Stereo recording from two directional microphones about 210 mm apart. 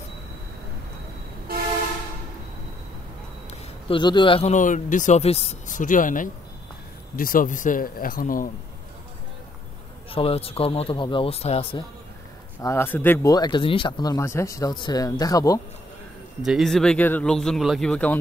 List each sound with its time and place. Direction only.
3.4 s a man's voice: 20° left (ahead or behind); by 8.5 s 40° left (ahead or behind)
10.1 s speech: 25° left (ahead or behind)
12.6 s speech: 10° left (ahead or behind)
16.4 s speech: centre (ahead or behind)